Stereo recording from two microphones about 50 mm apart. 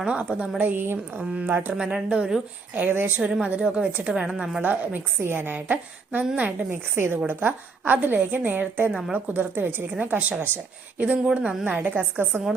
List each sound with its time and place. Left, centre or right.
0.0 s a woman's voice: right
0.6 s a woman's voice: right
1.4 s a woman's voice: right
1.7 s speech: centre
2.0 s a woman's voice: right
2.7 s a woman's voice: right
3.4 s a woman's voice: right
4.6 s a woman's voice: right
5.2 s a woman's voice: right
6.9 s a woman's voice: right
8.9 s a woman's voice: centre
9.1 s a woman's voice: right
10.0 s a woman's voice: right